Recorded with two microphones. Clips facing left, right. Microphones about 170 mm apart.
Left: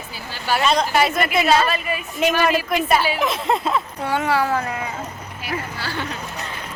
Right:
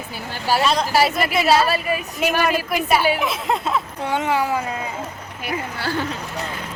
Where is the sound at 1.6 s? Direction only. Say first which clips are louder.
Right 2 dB; 35° right (ahead or behind).